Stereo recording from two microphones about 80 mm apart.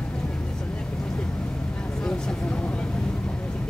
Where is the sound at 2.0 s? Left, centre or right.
Centre.